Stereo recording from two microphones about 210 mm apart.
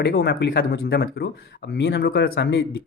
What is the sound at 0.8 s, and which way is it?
Speech, 50° left (ahead or behind).